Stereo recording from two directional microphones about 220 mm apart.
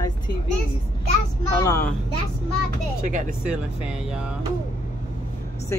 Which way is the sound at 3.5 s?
5° right (ahead or behind).